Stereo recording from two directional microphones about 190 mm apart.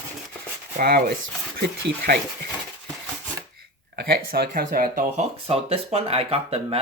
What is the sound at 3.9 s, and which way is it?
Speech, 55° right (ahead or behind).